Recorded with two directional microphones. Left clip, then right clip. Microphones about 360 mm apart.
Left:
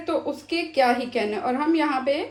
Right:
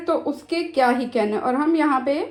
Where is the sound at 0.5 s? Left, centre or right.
Centre.